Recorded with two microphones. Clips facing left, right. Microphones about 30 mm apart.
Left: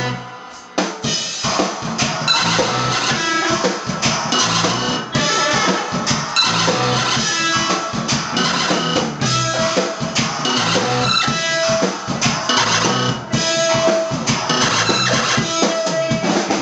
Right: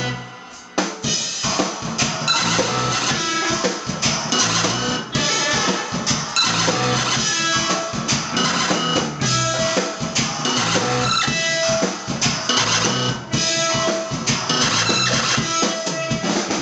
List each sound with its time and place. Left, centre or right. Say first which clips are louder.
2.2 s music: left 3 dB; left
8.4 s music: left 2 dB; left
11.2 s music: left 2 dB; centre